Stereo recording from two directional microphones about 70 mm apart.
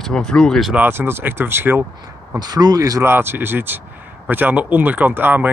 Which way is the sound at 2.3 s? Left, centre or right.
Right.